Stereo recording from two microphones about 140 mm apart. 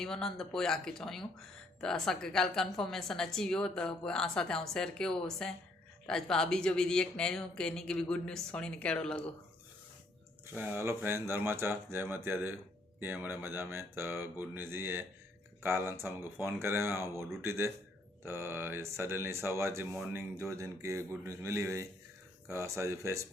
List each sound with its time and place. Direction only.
0.0 s a woman's voice: 5° left (ahead or behind)
10.4 s speech: 10° right (ahead or behind)